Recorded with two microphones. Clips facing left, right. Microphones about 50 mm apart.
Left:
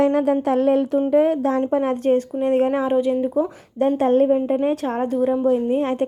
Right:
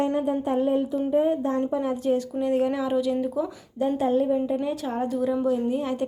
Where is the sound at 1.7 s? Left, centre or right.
Left.